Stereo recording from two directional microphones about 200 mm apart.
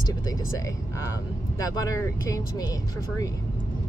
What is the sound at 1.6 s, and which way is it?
Speech, 15° left (ahead or behind).